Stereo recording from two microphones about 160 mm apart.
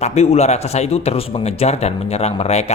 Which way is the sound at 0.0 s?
40° left (ahead or behind).